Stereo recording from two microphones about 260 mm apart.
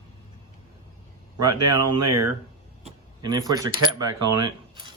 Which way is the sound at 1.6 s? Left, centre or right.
Right.